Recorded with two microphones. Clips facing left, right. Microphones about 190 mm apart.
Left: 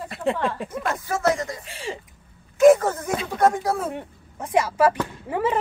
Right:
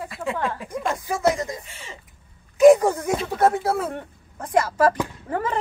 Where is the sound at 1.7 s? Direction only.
90° left.